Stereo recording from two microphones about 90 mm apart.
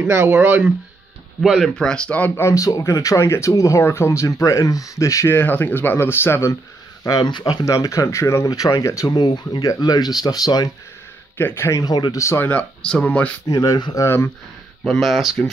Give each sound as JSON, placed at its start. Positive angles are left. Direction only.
{"t": 0.0, "sound": "speech", "side_deg": -25}
{"t": 1.4, "sound": "speech", "side_deg": 0}
{"t": 2.3, "sound": "speech", "side_deg": 35}
{"t": 5.3, "sound": "speech", "side_deg": 20}
{"t": 7.2, "sound": "speech", "side_deg": 60}
{"t": 7.6, "sound": "speech", "side_deg": 35}
{"t": 11.3, "sound": "speech", "side_deg": 25}
{"t": 11.8, "sound": "speech", "side_deg": 45}
{"t": 12.2, "sound": "speech", "side_deg": 30}
{"t": 12.4, "sound": "speech", "side_deg": 15}
{"t": 13.5, "sound": "speech", "side_deg": 40}
{"t": 13.9, "sound": "speech", "side_deg": 25}
{"t": 14.9, "sound": "speech", "side_deg": 0}